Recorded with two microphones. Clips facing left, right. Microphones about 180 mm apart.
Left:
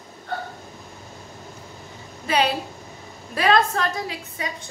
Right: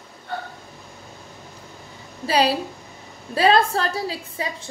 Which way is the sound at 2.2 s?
35° right (ahead or behind).